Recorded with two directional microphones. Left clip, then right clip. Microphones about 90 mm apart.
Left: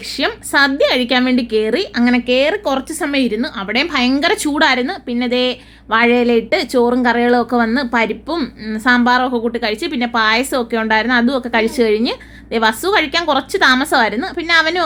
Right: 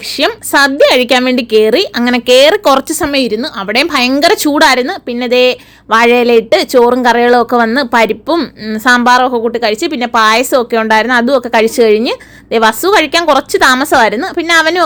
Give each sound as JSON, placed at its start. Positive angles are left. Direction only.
{"t": 0.2, "sound": "a woman's voice", "side_deg": -30}
{"t": 2.9, "sound": "a woman's voice", "side_deg": -35}
{"t": 7.9, "sound": "a woman's voice", "side_deg": -40}